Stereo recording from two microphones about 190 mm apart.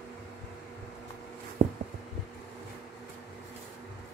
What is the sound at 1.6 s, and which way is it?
Heart sounds, 45° right (ahead or behind).